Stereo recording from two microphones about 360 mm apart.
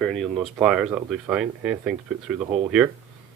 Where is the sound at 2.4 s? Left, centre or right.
Centre.